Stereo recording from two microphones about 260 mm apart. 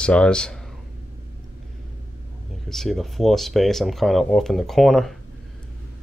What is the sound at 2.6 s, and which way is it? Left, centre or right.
Speech, centre.